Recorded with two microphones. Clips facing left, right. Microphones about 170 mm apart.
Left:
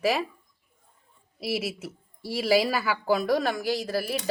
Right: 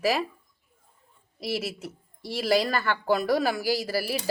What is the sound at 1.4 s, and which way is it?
Speech, centre (ahead or behind).